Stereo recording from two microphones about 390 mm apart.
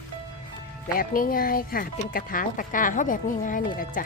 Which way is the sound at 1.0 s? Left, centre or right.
Left.